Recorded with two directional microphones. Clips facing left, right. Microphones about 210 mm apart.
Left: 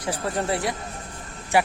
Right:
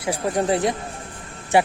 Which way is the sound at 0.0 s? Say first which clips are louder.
Right 4 dB; 15° right (ahead or behind).